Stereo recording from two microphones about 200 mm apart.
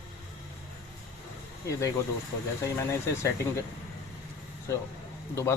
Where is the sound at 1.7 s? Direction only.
15° left (ahead or behind).